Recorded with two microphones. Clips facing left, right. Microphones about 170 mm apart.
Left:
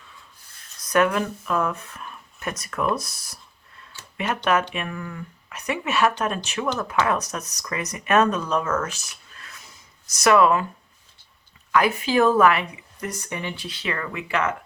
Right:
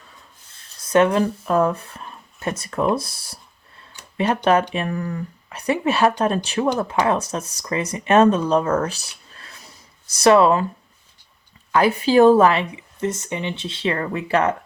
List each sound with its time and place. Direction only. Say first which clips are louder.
0.8 s speech: right 4 dB; 25° right (ahead or behind)
3.9 s a sound: even; 15° right (ahead or behind)
4.7 s speech: right 6 dB; 35° right (ahead or behind)
11.7 s speech: right 4 dB; 35° right (ahead or behind)